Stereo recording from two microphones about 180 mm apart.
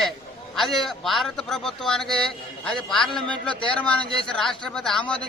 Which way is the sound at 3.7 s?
5° left (ahead or behind).